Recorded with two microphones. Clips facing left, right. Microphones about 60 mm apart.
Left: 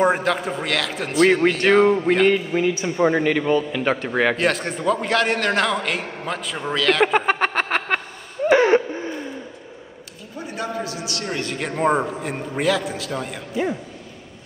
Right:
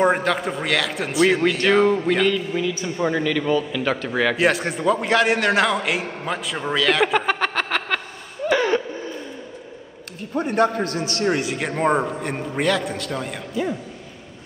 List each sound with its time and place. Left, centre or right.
0.0 s a man's voice: centre
2.2 s a man's voice: left
2.8 s a man's voice: left
4.4 s a man's voice: centre
7.2 s a sound: left
8.5 s a sound: left
10.3 s a man's voice: right
11.4 s a man's voice: centre